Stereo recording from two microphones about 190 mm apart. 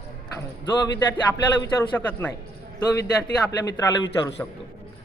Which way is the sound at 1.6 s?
20° left (ahead or behind).